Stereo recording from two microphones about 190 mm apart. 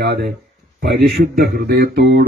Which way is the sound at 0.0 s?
60° right (ahead or behind).